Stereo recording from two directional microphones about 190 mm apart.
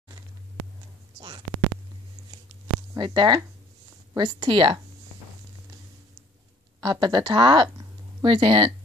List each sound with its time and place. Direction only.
3.0 s speech: 25° right (ahead or behind)
6.8 s speech: 25° right (ahead or behind)